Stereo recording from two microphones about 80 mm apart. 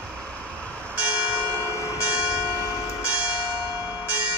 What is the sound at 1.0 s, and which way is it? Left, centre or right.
Church bell, right.